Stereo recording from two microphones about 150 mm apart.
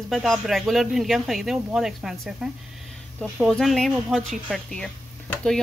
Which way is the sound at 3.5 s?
Centre (ahead or behind).